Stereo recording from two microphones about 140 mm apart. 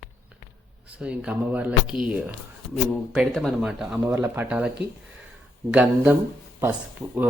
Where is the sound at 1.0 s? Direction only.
10° right (ahead or behind).